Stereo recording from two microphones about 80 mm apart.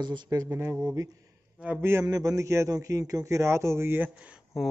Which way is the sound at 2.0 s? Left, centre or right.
Right.